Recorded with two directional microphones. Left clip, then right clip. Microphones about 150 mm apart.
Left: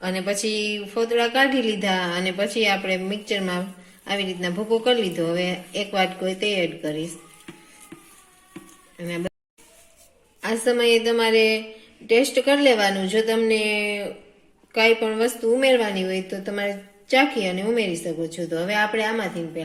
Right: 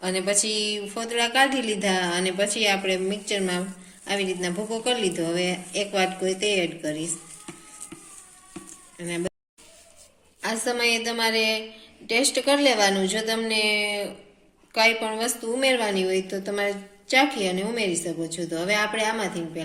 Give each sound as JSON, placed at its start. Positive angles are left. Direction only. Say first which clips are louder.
{"t": 0.0, "sound": "a woman's voice", "louder": "even", "side_deg": 50}
{"t": 9.0, "sound": "speech", "louder": "left 1 dB", "side_deg": 45}
{"t": 10.4, "sound": "a sound", "louder": "left 5 dB", "side_deg": 50}
{"t": 11.0, "sound": "a woman's voice", "louder": "left 5 dB", "side_deg": 55}